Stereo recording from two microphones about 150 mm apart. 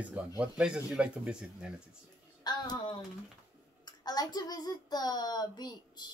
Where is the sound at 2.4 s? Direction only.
30° left (ahead or behind).